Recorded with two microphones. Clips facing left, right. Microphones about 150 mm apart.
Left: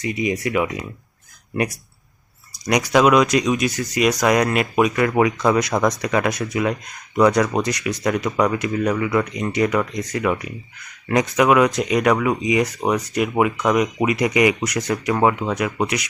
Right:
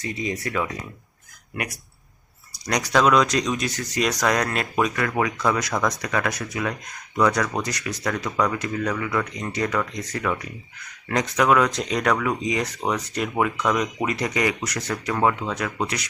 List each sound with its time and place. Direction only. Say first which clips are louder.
0.0 s speech: left 6 dB; 15° left (ahead or behind)
2.6 s speech: left 4 dB; 10° left (ahead or behind)